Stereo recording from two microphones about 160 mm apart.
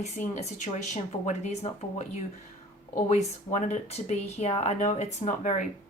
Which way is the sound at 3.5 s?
45° left (ahead or behind).